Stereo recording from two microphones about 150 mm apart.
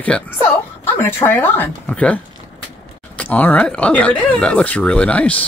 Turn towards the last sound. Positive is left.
turn(degrees=10)  # may be behind; listen again after turning